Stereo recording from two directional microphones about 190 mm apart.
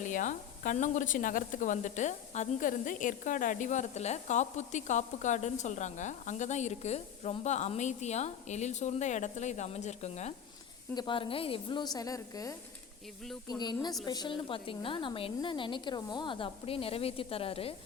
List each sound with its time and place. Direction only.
0.0 s speech: 40° left (ahead or behind)
10.9 s speech: 25° left (ahead or behind)